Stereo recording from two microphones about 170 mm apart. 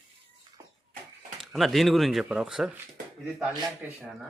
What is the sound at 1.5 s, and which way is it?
Speech, centre (ahead or behind).